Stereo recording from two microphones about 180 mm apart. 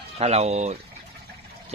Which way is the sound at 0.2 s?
35° right (ahead or behind).